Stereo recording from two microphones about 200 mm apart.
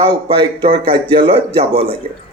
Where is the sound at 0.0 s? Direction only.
25° right (ahead or behind).